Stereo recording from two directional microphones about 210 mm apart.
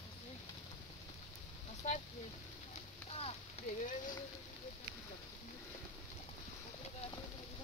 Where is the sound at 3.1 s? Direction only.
30° left (ahead or behind).